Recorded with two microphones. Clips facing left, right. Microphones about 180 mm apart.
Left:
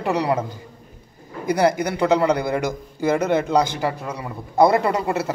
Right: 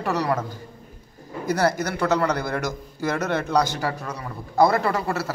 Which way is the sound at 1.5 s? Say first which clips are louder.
Left 4 dB; 15° left (ahead or behind).